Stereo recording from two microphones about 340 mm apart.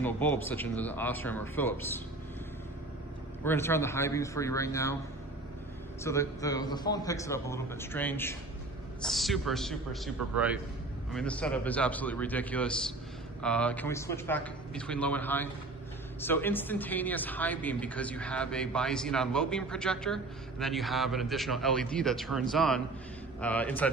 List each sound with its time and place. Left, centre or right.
0.0 s speech: centre
3.4 s a man's voice: centre
6.0 s a man's voice: centre